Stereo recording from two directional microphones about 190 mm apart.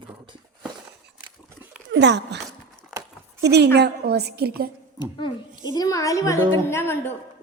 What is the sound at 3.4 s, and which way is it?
A woman's voice, 60° right (ahead or behind).